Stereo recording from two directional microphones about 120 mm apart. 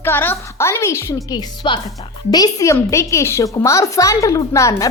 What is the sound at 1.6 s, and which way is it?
Speech, 45° left (ahead or behind).